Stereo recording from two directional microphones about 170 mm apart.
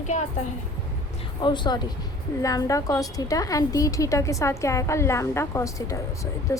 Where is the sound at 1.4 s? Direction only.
25° left (ahead or behind).